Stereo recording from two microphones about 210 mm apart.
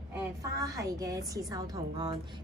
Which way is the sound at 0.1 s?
15° right (ahead or behind).